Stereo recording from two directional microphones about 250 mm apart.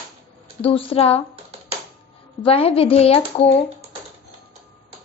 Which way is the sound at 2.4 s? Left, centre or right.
Left.